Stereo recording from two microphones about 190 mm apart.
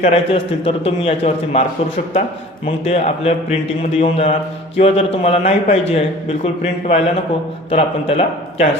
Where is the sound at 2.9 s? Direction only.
30° left (ahead or behind).